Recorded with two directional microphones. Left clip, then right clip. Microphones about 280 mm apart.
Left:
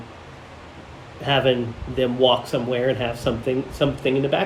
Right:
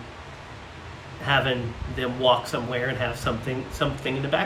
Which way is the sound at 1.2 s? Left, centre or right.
Centre.